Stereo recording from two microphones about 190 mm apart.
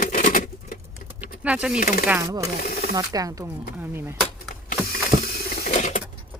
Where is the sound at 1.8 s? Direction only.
45° left (ahead or behind).